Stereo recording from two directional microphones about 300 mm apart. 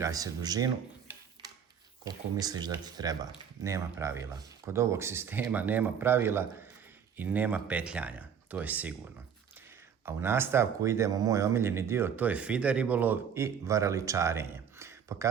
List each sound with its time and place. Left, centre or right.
0.0 s speech: centre
2.0 s speech: centre
10.1 s speech: centre